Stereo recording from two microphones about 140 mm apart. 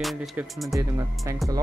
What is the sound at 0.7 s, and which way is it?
Speech, 20° right (ahead or behind).